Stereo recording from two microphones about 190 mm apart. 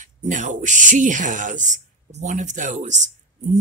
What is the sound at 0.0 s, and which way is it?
Speech, 40° right (ahead or behind).